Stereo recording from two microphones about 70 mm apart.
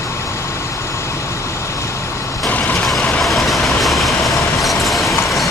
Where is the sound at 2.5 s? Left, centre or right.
Left.